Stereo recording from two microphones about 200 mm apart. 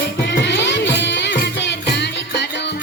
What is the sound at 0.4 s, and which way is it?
Music, 60° left (ahead or behind).